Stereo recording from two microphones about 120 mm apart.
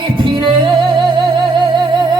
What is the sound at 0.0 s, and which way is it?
Music, 40° right (ahead or behind).